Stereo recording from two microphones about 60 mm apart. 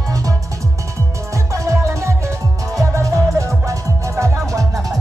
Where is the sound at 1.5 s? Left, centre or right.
Right.